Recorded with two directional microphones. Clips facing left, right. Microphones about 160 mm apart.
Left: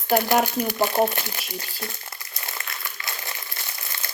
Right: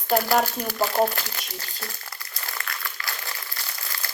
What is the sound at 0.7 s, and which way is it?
Crumpling, 20° left (ahead or behind).